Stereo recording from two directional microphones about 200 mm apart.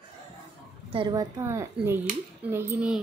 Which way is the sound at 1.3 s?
15° right (ahead or behind).